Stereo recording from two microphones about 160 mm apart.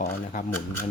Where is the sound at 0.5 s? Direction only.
15° left (ahead or behind).